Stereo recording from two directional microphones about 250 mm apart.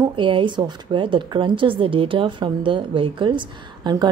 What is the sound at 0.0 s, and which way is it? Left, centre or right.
A woman's voice, centre.